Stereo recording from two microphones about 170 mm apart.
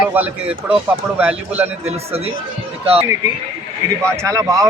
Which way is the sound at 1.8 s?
35° right (ahead or behind).